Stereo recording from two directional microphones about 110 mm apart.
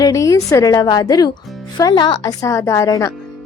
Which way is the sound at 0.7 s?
40° left (ahead or behind).